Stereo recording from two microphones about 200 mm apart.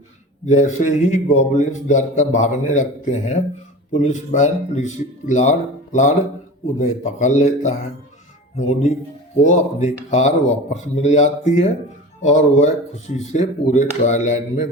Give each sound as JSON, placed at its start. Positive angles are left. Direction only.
{"t": 0.4, "sound": "speech", "side_deg": 35}